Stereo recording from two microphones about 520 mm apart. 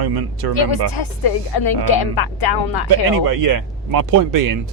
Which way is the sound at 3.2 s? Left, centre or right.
Right.